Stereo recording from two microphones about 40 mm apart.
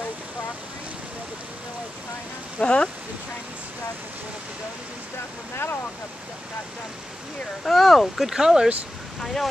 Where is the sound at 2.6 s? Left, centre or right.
Left.